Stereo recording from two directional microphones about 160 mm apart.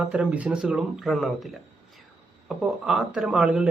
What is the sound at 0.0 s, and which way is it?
Speech, 10° right (ahead or behind).